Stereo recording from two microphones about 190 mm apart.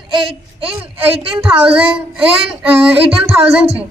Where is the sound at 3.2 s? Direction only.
30° right (ahead or behind).